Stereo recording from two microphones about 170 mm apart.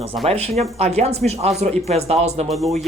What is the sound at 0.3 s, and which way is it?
Speech, 35° right (ahead or behind).